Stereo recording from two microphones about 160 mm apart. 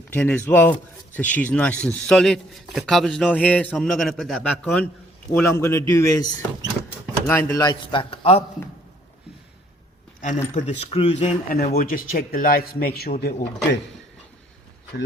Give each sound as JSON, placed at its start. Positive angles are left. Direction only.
{"t": 0.1, "sound": "a man's voice", "side_deg": 10}
{"t": 5.3, "sound": "speech", "side_deg": 15}
{"t": 7.3, "sound": "speech", "side_deg": 15}
{"t": 7.6, "sound": "a man's voice", "side_deg": 25}
{"t": 10.2, "sound": "speech", "side_deg": 50}
{"t": 10.5, "sound": "speech", "side_deg": 40}
{"t": 11.4, "sound": "a man's voice", "side_deg": 70}